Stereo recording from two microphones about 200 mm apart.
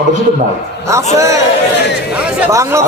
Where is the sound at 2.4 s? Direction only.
15° right (ahead or behind).